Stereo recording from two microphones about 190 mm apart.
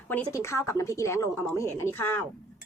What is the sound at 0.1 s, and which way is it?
Speech, 10° left (ahead or behind).